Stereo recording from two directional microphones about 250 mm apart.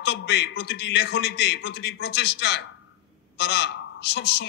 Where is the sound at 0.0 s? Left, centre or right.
Left.